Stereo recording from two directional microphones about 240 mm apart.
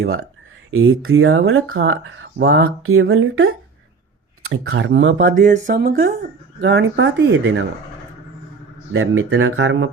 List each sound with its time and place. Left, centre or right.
0.7 s speech: right
5.4 s speech: right
6.6 s speech: right
8.9 s speech: right